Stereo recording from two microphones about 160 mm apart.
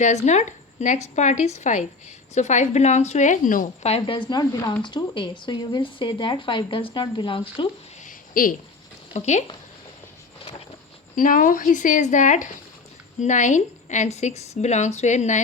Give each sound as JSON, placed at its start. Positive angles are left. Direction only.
{"t": 0.0, "sound": "a woman's voice", "side_deg": 45}
{"t": 3.8, "sound": "speech", "side_deg": 35}
{"t": 8.0, "sound": "a sound", "side_deg": 60}
{"t": 9.1, "sound": "a woman's voice", "side_deg": 45}
{"t": 11.1, "sound": "a woman's voice", "side_deg": 55}